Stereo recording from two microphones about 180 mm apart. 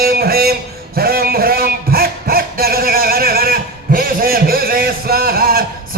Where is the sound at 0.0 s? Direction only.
60° right (ahead or behind).